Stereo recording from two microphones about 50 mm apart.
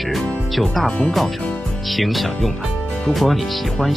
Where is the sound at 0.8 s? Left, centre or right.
Centre.